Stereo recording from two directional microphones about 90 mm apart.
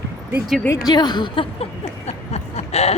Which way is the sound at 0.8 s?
55° left (ahead or behind).